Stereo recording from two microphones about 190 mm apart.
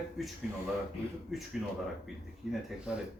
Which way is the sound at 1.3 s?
Centre (ahead or behind).